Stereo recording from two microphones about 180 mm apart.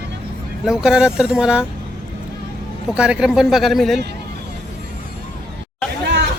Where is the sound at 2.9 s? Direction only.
5° right (ahead or behind).